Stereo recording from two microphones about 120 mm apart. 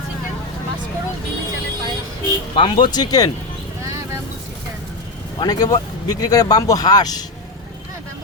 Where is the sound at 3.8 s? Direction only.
25° right (ahead or behind).